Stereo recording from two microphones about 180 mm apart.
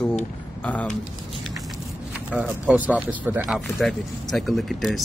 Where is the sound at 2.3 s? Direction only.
5° right (ahead or behind).